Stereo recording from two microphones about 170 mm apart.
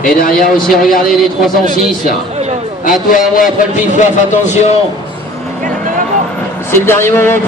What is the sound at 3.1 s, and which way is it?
Speech, 50° left (ahead or behind).